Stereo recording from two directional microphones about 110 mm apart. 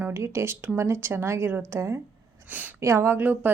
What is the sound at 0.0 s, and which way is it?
A woman's voice, 25° right (ahead or behind).